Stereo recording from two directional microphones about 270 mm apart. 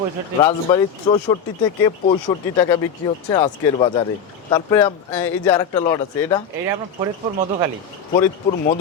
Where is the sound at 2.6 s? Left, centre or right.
Centre.